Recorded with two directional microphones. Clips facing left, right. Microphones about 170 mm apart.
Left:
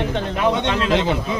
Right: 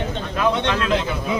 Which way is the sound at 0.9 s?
85° left.